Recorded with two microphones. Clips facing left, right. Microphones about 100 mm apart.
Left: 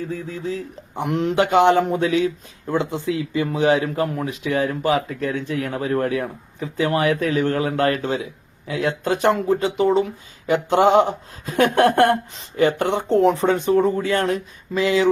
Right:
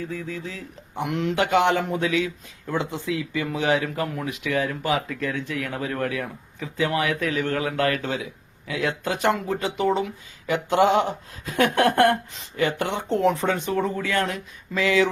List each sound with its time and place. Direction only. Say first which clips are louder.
0.1 s speech: left 5 dB; 35° left (ahead or behind)